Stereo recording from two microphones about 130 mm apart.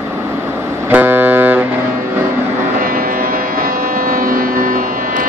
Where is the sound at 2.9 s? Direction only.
90° right.